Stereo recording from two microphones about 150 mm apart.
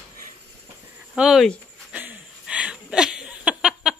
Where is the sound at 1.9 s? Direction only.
10° right (ahead or behind).